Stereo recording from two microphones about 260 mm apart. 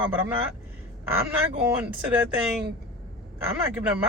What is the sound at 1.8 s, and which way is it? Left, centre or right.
Speech, centre.